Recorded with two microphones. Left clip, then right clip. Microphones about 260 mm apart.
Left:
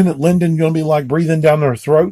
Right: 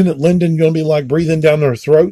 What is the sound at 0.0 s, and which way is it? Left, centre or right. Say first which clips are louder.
Speech: right 2 dB; centre.